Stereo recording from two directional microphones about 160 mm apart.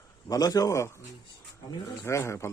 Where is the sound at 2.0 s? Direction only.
15° left (ahead or behind).